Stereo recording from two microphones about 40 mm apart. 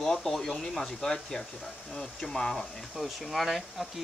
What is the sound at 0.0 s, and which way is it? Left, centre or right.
Speech, centre.